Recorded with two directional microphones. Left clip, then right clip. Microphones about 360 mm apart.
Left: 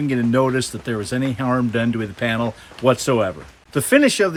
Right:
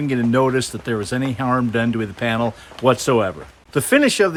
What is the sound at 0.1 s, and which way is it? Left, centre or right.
Speech, centre.